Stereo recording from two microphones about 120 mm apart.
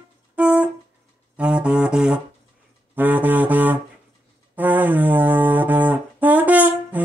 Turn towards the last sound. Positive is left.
turn(degrees=-15)  # may be behind; listen again after turning